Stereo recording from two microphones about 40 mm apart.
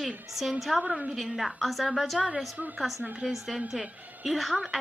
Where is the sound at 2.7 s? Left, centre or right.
Centre.